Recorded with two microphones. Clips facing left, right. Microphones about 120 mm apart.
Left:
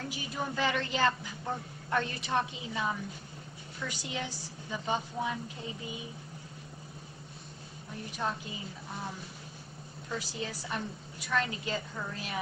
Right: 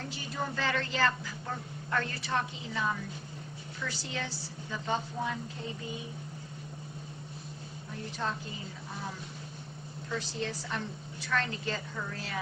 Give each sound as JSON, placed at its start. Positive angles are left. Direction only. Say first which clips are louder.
{"t": 0.1, "sound": "a woman's voice", "louder": "even", "side_deg": 15}
{"t": 3.8, "sound": "a woman's voice", "louder": "even", "side_deg": 15}
{"t": 10.1, "sound": "a woman's voice", "louder": "right 2 dB", "side_deg": 10}